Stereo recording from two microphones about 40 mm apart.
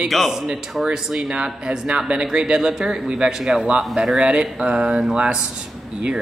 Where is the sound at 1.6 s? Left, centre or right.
Right.